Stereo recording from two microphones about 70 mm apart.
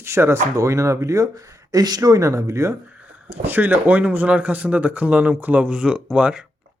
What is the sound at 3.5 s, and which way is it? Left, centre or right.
Speech, right.